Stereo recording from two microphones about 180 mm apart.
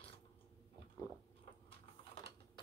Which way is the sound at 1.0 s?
20° left (ahead or behind).